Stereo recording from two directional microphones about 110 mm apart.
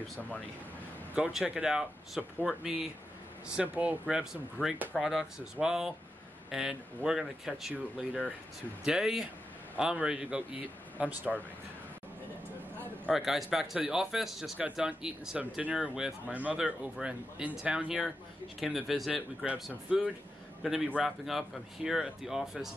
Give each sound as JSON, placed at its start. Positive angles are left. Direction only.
{"t": 1.1, "sound": "speech", "side_deg": -10}
{"t": 4.6, "sound": "speech", "side_deg": 20}
{"t": 4.9, "sound": "speech", "side_deg": -5}
{"t": 8.8, "sound": "speech", "side_deg": -5}
{"t": 13.1, "sound": "speech", "side_deg": -5}